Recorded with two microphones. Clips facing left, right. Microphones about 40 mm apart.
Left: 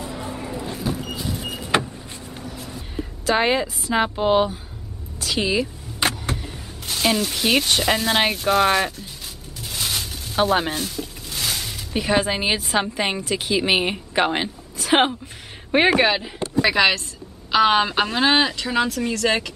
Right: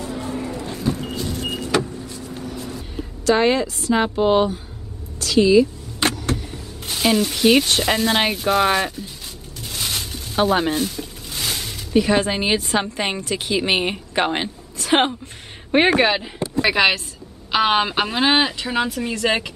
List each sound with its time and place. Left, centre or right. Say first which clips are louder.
0.0 s vehicle: right 3 dB; centre
2.0 s vehicle: right 4 dB; left
2.3 s vehicle: right 4 dB; centre
3.3 s a woman's voice: right 3 dB; centre
5.2 s a woman's voice: right 8 dB; centre